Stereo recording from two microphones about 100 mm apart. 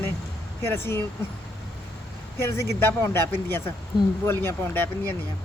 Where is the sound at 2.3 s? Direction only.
25° left (ahead or behind).